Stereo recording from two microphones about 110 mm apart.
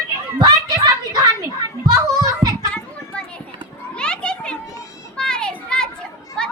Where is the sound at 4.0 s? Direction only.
10° left (ahead or behind).